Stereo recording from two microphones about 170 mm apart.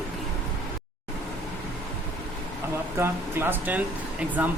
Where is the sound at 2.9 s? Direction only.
10° right (ahead or behind).